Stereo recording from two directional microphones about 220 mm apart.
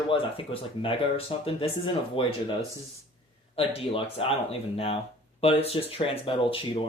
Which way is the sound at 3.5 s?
25° left (ahead or behind).